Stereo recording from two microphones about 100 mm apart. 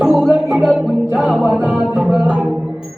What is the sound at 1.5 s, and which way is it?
Music, 10° right (ahead or behind).